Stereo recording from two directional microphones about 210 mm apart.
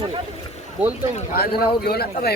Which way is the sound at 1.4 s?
45° left (ahead or behind).